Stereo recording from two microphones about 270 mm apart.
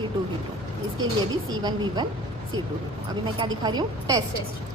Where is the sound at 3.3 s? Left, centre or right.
Centre.